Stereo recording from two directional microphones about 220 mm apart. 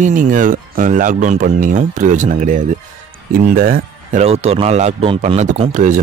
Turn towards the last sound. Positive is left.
turn(degrees=-35)  # may be behind; listen again after turning